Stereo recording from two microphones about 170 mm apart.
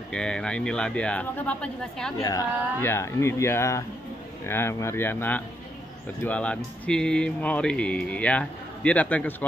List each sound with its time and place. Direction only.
0.1 s speech: 5° left (ahead or behind)
2.2 s speech: 15° left (ahead or behind)